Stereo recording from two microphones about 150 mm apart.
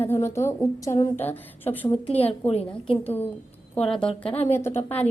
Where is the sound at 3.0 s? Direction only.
10° left (ahead or behind).